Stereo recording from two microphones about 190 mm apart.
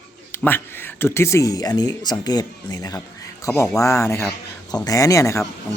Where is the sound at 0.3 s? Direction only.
10° left (ahead or behind).